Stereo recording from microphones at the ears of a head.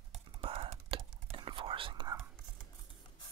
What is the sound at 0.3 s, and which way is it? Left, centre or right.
Whispering, right.